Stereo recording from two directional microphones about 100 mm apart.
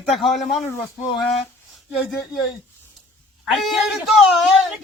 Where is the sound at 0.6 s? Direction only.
25° left (ahead or behind).